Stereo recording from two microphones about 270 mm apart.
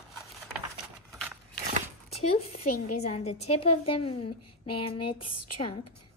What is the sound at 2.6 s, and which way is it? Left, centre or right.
Speech, left.